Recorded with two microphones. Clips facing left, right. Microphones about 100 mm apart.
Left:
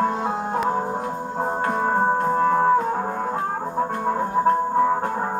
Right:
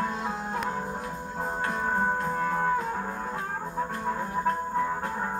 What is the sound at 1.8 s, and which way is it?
Music, 40° left (ahead or behind).